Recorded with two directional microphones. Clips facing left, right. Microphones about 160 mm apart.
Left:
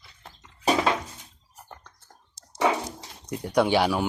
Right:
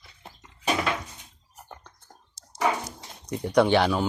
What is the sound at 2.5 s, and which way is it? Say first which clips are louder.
Dog: left 2 dB; 25° left (ahead or behind).